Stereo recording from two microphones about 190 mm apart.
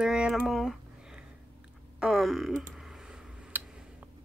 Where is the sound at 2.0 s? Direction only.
Centre (ahead or behind).